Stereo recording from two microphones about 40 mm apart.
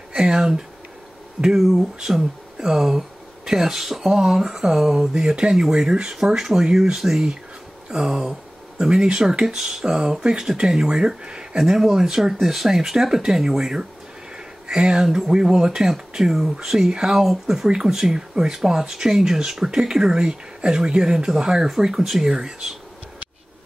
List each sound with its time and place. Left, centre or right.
0.1 s a sound: centre
1.6 s speech: centre; by 11.4 s right
11.5 s speech: centre